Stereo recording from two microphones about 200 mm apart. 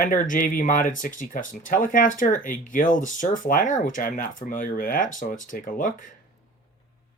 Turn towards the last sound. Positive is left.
turn(degrees=40)  # may be behind; listen again after turning